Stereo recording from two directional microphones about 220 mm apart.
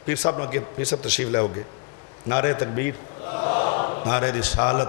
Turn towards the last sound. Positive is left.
turn(degrees=20)  # may be behind; listen again after turning